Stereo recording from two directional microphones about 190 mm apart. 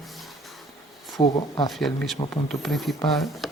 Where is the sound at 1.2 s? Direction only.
25° left (ahead or behind).